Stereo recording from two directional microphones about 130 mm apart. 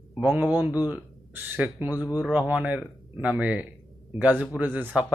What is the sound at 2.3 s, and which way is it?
Speech, 10° right (ahead or behind).